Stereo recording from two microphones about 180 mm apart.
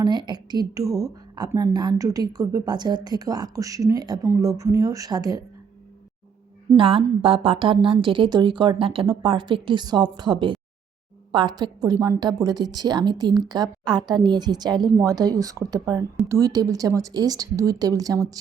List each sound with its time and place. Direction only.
0.0 s a woman's voice: 25° right (ahead or behind)
6.7 s a woman's voice: 30° right (ahead or behind)